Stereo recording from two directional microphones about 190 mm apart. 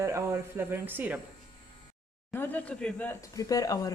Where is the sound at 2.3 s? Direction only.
10° left (ahead or behind).